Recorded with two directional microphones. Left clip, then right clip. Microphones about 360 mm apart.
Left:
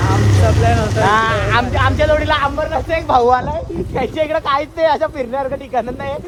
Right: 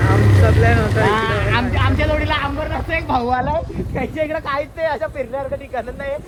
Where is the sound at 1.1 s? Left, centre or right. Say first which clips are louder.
Left 4 dB; centre.